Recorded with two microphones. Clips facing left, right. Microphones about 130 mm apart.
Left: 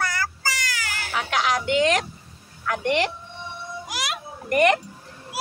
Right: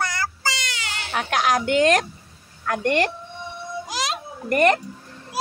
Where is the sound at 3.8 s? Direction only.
25° right (ahead or behind).